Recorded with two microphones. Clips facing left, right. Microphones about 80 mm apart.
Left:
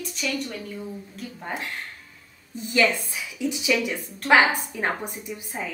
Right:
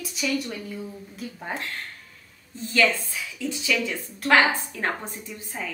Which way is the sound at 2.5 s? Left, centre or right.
Centre.